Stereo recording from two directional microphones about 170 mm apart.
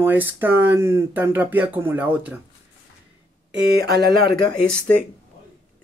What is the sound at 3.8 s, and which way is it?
Speech, 70° right (ahead or behind).